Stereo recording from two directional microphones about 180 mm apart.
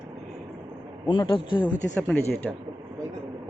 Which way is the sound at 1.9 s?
5° left (ahead or behind).